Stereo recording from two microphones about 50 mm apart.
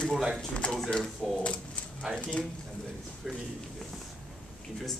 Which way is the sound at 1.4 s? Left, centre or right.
Left.